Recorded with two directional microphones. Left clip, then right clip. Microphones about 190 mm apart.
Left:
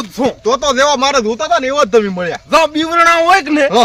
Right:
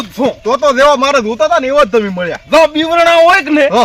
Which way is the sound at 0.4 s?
35° left (ahead or behind).